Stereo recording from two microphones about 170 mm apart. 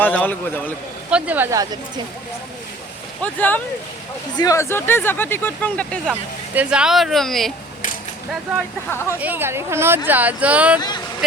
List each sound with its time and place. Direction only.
0.0 s speech: 10° left (ahead or behind)
1.1 s speech: 10° right (ahead or behind)
3.2 s speech: 10° left (ahead or behind)
6.5 s speech: 5° right (ahead or behind)
8.9 s speech: 15° left (ahead or behind)
9.1 s speech: 10° right (ahead or behind)
10.8 s speech: 25° left (ahead or behind)